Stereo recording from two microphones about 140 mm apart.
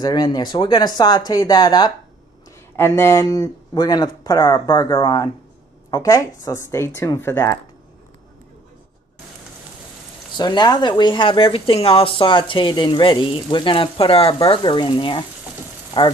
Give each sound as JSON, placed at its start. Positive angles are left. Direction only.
{"t": 0.0, "sound": "speech", "side_deg": 30}
{"t": 2.7, "sound": "speech", "side_deg": 20}
{"t": 10.3, "sound": "speech", "side_deg": 30}